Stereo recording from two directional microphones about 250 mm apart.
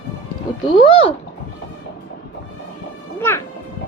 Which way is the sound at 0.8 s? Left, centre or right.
Left.